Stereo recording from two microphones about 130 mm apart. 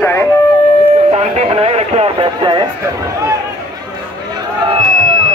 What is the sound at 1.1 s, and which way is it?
Speech, 50° right (ahead or behind).